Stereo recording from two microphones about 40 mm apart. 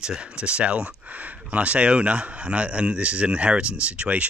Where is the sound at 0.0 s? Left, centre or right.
Right.